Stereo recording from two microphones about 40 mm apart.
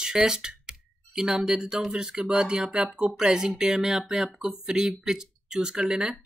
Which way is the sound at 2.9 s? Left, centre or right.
Centre.